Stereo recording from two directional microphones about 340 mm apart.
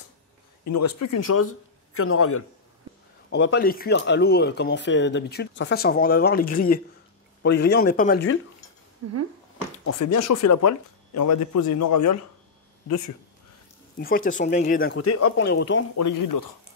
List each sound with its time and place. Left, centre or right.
0.9 s speech: left
9.0 s speech: right
9.8 s speech: left
13.9 s speech: left
15.0 s speech: left
16.0 s speech: left